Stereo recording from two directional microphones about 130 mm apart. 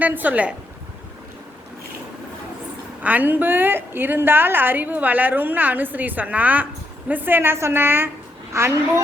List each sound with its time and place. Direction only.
0.0 s a woman's voice: 15° right (ahead or behind)
3.0 s a woman's voice: 10° right (ahead or behind)